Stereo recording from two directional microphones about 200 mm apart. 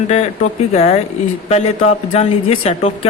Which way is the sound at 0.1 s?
35° left (ahead or behind).